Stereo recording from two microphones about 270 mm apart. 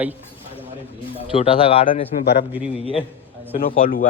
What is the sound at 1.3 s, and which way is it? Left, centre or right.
A man's voice, left.